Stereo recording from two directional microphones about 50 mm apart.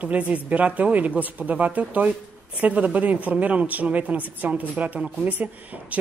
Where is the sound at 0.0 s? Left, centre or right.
Right.